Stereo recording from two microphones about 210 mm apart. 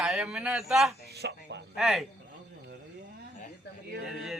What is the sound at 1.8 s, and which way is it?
Speech, centre (ahead or behind).